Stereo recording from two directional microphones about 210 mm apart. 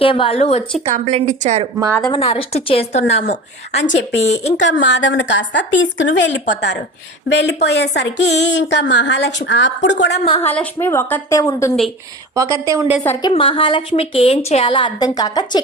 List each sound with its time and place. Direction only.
0.0 s a woman's voice: 25° left (ahead or behind)
0.9 s a woman's voice: 30° right (ahead or behind)
2.0 s a woman's voice: 25° left (ahead or behind)
4.5 s a woman's voice: 60° left (ahead or behind)
10.2 s a woman's voice: 30° left (ahead or behind)
10.5 s a woman's voice: 10° left (ahead or behind)
12.3 s a woman's voice: 15° right (ahead or behind)
13.0 s a woman's voice: 20° left (ahead or behind)